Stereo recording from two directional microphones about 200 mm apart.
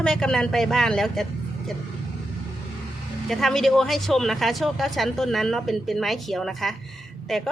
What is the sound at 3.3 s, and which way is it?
A woman's voice, centre (ahead or behind).